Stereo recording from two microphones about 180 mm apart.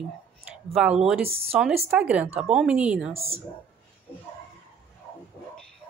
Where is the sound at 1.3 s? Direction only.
30° right (ahead or behind).